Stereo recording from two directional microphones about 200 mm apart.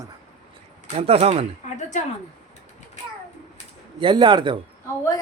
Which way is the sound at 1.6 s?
35° left (ahead or behind).